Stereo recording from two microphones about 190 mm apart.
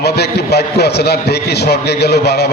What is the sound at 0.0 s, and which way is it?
A man's voice, 60° left (ahead or behind).